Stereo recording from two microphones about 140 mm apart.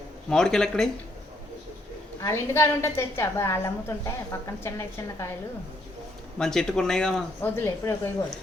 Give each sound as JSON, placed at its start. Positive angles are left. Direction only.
{"t": 0.3, "sound": "speech", "side_deg": 5}
{"t": 2.2, "sound": "a woman's voice", "side_deg": 15}
{"t": 6.4, "sound": "speech", "side_deg": 5}
{"t": 7.5, "sound": "speech", "side_deg": 20}